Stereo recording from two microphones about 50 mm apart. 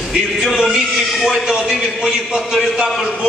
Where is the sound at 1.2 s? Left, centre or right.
Centre.